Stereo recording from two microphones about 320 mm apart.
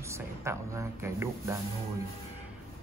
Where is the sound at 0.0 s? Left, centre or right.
Centre.